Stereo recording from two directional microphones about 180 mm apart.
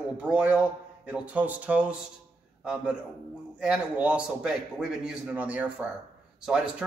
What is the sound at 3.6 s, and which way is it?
A man's voice, 5° right (ahead or behind).